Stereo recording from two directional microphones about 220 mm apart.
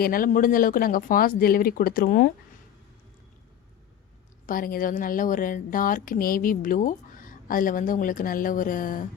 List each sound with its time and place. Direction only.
0.0 s a woman's voice: 40° left (ahead or behind)
4.4 s a woman's voice: 40° left (ahead or behind)